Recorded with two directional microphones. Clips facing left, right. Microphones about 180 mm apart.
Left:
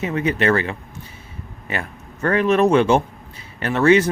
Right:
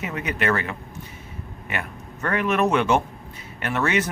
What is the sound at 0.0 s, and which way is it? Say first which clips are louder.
Speech: left 6 dB; 30° left (ahead or behind).